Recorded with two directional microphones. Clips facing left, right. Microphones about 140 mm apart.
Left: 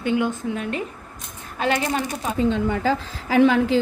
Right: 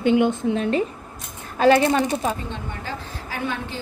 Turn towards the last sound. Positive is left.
turn(degrees=90)